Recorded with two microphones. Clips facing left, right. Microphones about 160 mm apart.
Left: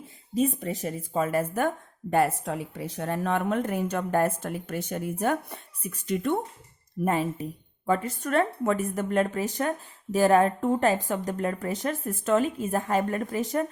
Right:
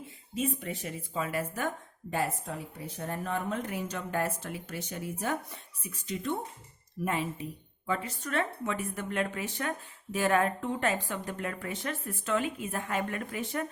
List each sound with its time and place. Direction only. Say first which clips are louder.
0.0 s speech: left 7 dB; 40° left (ahead or behind); by 3.6 s 75° left (ahead or behind)
3.6 s speech: left 8 dB; 55° left (ahead or behind)
7.0 s speech: left 6 dB; 45° left (ahead or behind)